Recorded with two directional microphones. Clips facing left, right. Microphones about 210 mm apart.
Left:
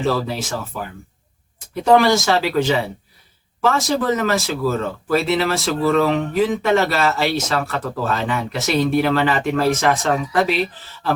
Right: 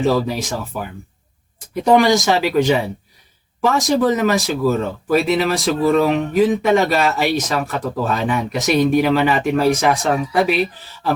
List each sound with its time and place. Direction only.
0.0 s speech: 15° right (ahead or behind)
1.7 s speech: 15° right (ahead or behind)